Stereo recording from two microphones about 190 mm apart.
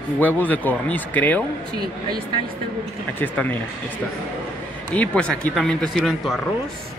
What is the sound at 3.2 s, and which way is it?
Speech, 10° left (ahead or behind).